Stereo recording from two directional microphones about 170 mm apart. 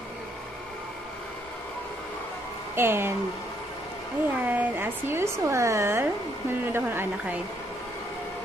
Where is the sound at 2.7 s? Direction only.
15° right (ahead or behind).